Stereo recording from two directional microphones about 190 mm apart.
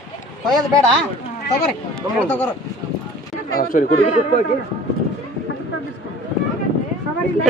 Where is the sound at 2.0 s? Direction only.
5° left (ahead or behind).